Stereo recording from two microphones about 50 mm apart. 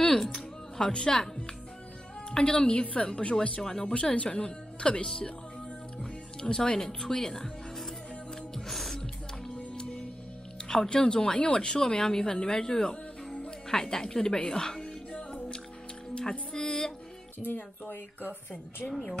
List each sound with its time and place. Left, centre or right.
0.0 s music: centre
0.7 s speech: centre
2.3 s speech: centre
3.6 s speech: centre
3.9 s speech: left
8.5 s music: centre
9.8 s music: centre
10.7 s a woman's voice: centre
16.2 s music: centre
17.4 s speech: left